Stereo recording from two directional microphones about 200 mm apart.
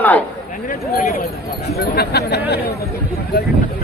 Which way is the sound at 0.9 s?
45° left (ahead or behind).